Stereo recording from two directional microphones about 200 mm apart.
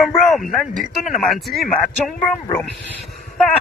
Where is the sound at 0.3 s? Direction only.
Centre (ahead or behind).